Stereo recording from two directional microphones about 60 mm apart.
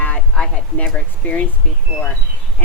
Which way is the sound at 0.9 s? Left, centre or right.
Centre.